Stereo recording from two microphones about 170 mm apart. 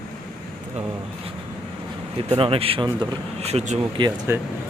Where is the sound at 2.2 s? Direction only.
35° right (ahead or behind).